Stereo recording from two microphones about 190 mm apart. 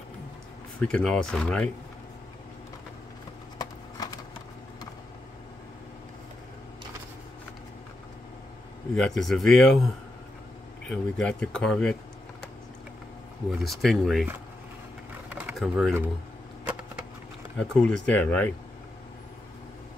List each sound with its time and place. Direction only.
0.7 s speech: 5° left (ahead or behind)
3.5 s a sound: 20° left (ahead or behind)
8.9 s speech: 5° left (ahead or behind)
13.6 s speech: centre (ahead or behind)
15.3 s a sound: 5° right (ahead or behind)
17.6 s speech: 5° left (ahead or behind)